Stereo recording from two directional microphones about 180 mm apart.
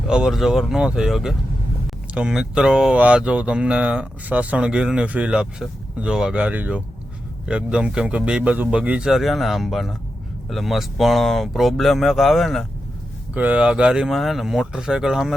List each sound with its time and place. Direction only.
0.1 s speech: 5° right (ahead or behind)